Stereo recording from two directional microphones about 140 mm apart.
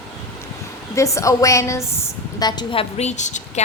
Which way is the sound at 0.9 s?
20° left (ahead or behind).